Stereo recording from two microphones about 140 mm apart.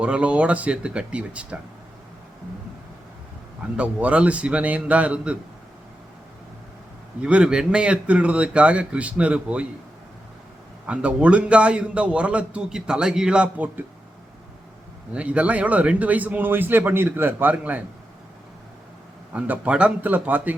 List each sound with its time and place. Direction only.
0.0 s a man's voice: 10° right (ahead or behind)
3.8 s a man's voice: 10° right (ahead or behind)
7.2 s a man's voice: 10° right (ahead or behind)
10.8 s a man's voice: 10° right (ahead or behind)
15.1 s a man's voice: 10° right (ahead or behind)
19.3 s a man's voice: 10° right (ahead or behind)